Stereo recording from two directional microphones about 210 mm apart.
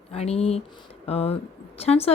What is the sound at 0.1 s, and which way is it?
A woman's voice, 30° left (ahead or behind).